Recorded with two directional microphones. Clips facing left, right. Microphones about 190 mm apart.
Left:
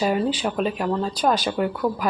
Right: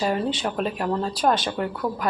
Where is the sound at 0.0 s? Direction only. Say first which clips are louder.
Left 2 dB; 5° left (ahead or behind).